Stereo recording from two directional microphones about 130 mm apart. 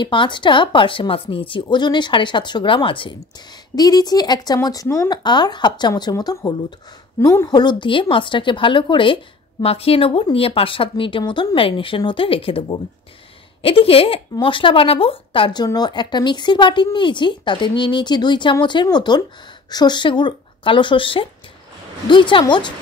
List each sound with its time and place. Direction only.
0.0 s speech: 40° left (ahead or behind); by 5.1 s 20° left (ahead or behind)
5.1 s a woman's voice: 35° left (ahead or behind)